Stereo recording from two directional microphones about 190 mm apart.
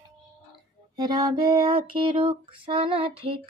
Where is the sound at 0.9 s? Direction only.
25° right (ahead or behind).